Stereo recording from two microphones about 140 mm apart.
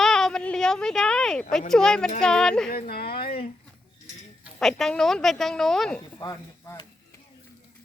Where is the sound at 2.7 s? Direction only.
90° left.